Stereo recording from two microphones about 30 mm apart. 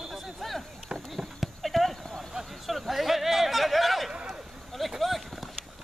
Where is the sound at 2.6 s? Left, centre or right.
Centre.